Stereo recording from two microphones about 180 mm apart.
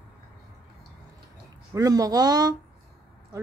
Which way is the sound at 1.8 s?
20° right (ahead or behind).